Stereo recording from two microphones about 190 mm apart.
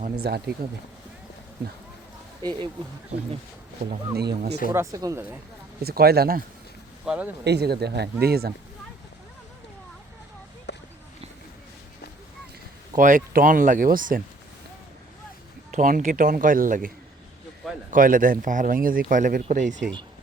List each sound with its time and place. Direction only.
0.2 s speech: 55° right (ahead or behind)
2.4 s speech: 25° right (ahead or behind)
4.2 s speech: 60° right (ahead or behind)
4.7 s speech: 15° right (ahead or behind)
5.8 s speech: 55° right (ahead or behind)
7.0 s speech: 5° right (ahead or behind)
7.4 s speech: 60° right (ahead or behind)
10.7 s a sound: 65° left (ahead or behind)
13.0 s speech: 45° right (ahead or behind)
15.7 s speech: 45° right (ahead or behind)
17.9 s speech: 45° right (ahead or behind)